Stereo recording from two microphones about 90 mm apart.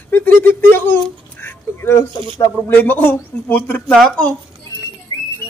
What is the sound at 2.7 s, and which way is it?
Speech, 20° left (ahead or behind).